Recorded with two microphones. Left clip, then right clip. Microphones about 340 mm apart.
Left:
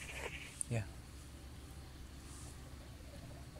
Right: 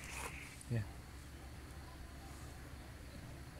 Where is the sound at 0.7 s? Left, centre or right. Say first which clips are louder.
Left 3 dB; left.